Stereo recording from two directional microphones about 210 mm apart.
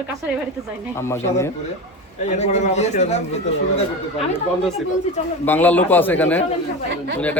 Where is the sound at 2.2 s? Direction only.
30° left (ahead or behind).